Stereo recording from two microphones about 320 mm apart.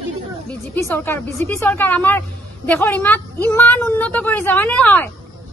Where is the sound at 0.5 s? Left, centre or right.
Centre.